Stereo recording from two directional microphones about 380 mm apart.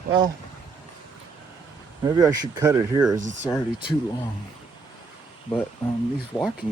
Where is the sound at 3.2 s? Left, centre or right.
Centre.